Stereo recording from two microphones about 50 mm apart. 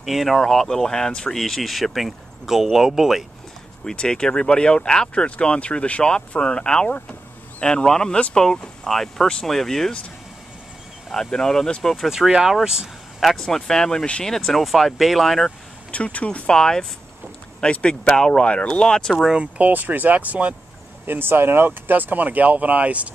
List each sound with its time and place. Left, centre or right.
0.0 s speech: centre
3.8 s speech: centre
11.1 s speech: centre
12.0 s speech: centre
13.2 s speech: centre
15.9 s speech: left
19.2 s speech: centre
19.6 s speech: right
21.1 s speech: right